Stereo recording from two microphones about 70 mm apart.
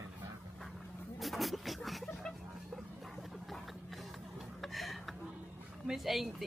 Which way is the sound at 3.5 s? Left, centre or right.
Centre.